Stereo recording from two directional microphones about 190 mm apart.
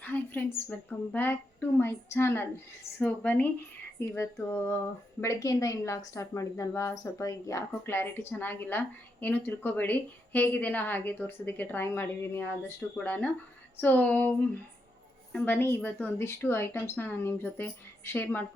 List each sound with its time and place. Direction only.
0.0 s a woman's voice: 10° left (ahead or behind)